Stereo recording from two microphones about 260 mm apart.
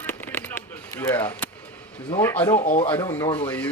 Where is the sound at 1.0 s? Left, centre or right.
Centre.